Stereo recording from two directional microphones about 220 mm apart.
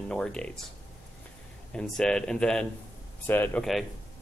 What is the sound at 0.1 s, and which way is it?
Speech, 5° left (ahead or behind).